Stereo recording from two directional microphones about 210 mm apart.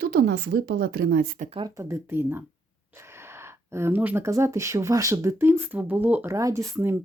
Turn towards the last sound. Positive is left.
turn(degrees=-15)  # may be behind; listen again after turning